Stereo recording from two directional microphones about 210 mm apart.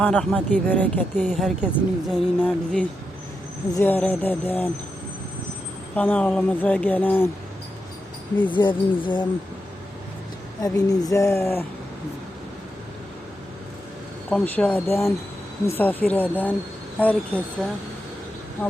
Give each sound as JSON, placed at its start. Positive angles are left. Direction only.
{"t": 0.0, "sound": "speech", "side_deg": 5}
{"t": 6.0, "sound": "speech", "side_deg": 5}
{"t": 8.4, "sound": "speech", "side_deg": 25}
{"t": 10.6, "sound": "speech", "side_deg": 15}
{"t": 14.3, "sound": "speech", "side_deg": 10}